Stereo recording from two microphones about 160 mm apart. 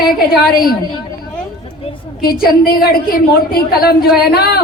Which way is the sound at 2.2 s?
70° left (ahead or behind).